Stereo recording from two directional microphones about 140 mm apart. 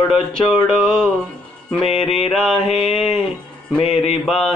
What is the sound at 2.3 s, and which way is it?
Mantra, 5° left (ahead or behind).